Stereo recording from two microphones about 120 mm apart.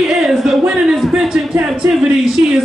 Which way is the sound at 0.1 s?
Centre (ahead or behind).